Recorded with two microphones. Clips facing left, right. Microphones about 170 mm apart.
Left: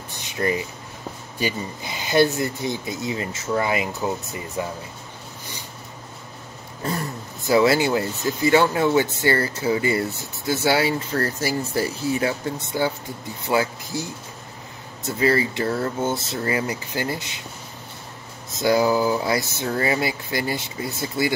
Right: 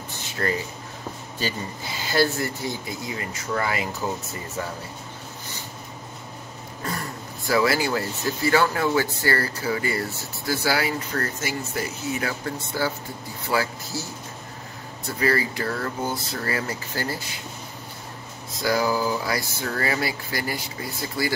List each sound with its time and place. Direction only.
0.4 s speech: 15° left (ahead or behind)
7.4 s speech: 25° left (ahead or behind)
15.0 s speech: 25° left (ahead or behind)
18.6 s speech: 25° left (ahead or behind)